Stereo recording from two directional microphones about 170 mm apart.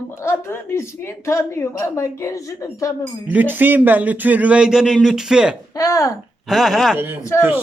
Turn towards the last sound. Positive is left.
turn(degrees=15)  # may be behind; listen again after turning